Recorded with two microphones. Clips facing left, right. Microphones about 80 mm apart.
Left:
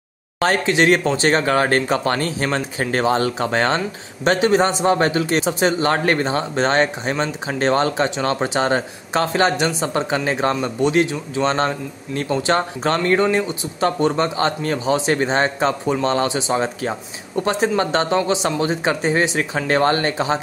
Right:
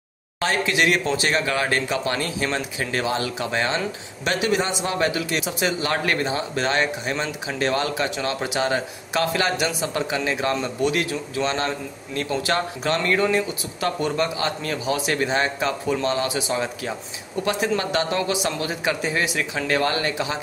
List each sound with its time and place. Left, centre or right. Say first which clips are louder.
0.4 s speech: left 5 dB; left
10.5 s speech: left 4 dB; centre
11.4 s speech: left 7 dB; left
16.3 s speech: left 4 dB; left